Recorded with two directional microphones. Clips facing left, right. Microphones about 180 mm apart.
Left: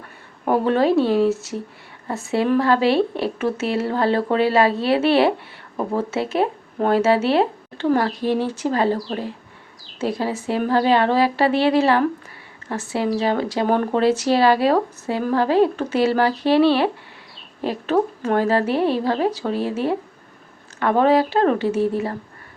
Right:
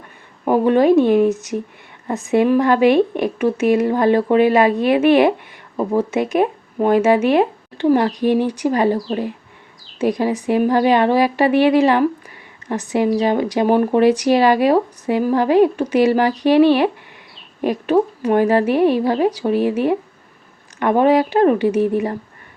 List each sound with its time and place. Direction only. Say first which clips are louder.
0.4 s a woman's voice: right 4 dB; 15° right (ahead or behind)